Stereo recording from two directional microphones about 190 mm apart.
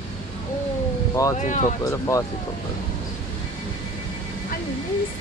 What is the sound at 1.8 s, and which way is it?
Speech, 15° left (ahead or behind).